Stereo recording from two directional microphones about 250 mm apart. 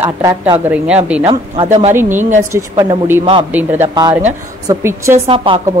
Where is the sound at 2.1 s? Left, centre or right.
Right.